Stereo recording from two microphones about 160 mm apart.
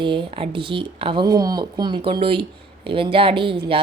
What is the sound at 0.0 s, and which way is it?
A woman's voice, 30° right (ahead or behind).